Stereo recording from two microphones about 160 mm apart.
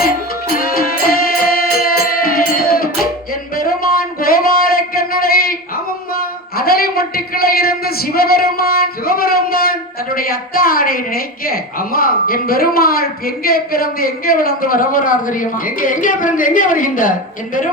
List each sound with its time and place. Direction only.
0.0 s music: 65° left (ahead or behind)
4.2 s a sound: 65° left (ahead or behind)
10.2 s a woman's voice: 65° left (ahead or behind)